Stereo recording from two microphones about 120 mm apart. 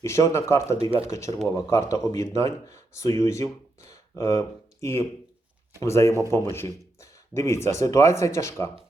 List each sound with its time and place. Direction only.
0.0 s speech: 25° left (ahead or behind)
0.8 s speech: 50° right (ahead or behind)
1.0 s speech: 25° left (ahead or behind)